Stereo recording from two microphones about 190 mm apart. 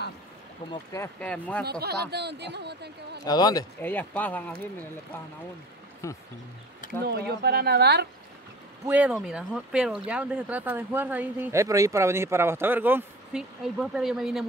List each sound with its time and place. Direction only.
0.7 s speech: 15° left (ahead or behind)
1.6 s speech: 55° right (ahead or behind)
3.3 s speech: 20° left (ahead or behind)
6.0 s speech: 15° left (ahead or behind)
7.1 s speech: 60° right (ahead or behind)
8.8 s speech: 5° right (ahead or behind)